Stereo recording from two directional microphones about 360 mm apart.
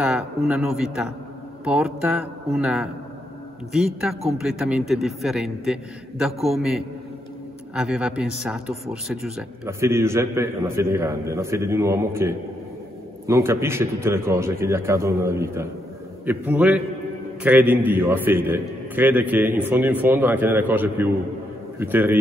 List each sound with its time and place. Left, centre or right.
0.0 s a man's voice: centre